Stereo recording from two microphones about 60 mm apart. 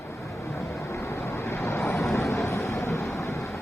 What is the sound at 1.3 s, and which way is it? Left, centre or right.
Vehicle, left.